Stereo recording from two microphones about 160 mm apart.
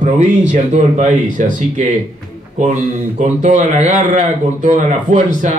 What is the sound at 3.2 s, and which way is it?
Speech, 50° right (ahead or behind).